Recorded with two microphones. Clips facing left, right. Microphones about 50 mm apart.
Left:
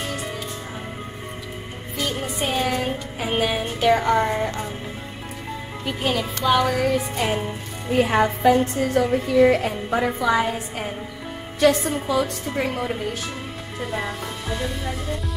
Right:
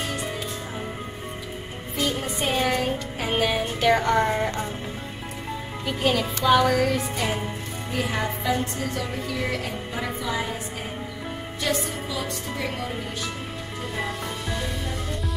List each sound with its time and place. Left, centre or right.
2.0 s music: centre
5.9 s music: centre
7.9 s a woman's voice: left
10.2 s a woman's voice: left
12.1 s a woman's voice: left
13.9 s music: centre